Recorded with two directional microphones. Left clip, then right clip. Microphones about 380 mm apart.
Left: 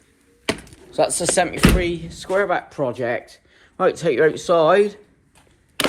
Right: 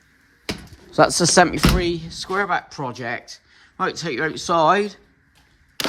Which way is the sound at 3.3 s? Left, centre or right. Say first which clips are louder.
Right 6 dB; centre.